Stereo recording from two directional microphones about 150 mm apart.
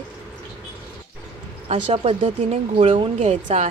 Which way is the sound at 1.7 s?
40° right (ahead or behind).